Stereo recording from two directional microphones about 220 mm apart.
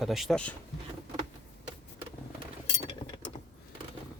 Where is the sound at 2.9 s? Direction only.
20° left (ahead or behind).